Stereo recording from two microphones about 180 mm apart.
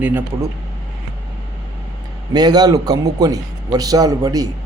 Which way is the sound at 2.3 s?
20° right (ahead or behind).